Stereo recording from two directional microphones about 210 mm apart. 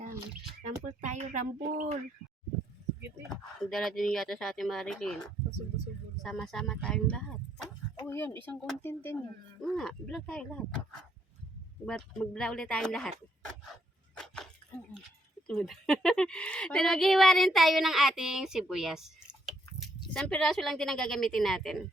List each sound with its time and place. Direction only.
1.0 s speech: 35° right (ahead or behind)
3.2 s speech: centre (ahead or behind)
11.9 s speech: 5° left (ahead or behind)
15.4 s speech: 5° left (ahead or behind)